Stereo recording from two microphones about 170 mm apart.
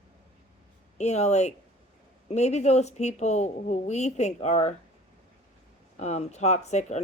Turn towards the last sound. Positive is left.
turn(degrees=40)  # may be behind; listen again after turning